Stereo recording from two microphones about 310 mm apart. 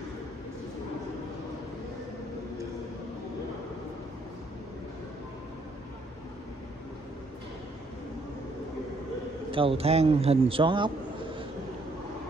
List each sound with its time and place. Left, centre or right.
9.5 s a man's voice: centre